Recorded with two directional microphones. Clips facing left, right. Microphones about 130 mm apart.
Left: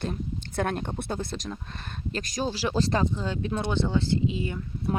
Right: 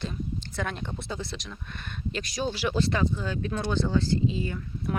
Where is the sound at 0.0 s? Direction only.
55° left (ahead or behind); by 3.0 s 35° left (ahead or behind).